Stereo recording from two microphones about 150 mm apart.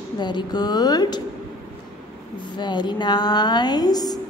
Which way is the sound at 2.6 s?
30° left (ahead or behind).